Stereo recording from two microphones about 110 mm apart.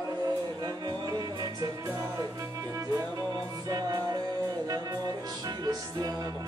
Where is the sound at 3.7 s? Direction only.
35° right (ahead or behind).